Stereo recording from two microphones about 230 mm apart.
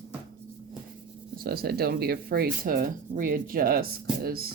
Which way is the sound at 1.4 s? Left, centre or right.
Right.